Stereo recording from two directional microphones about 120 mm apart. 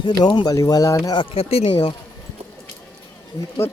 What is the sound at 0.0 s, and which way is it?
Speech, 40° left (ahead or behind).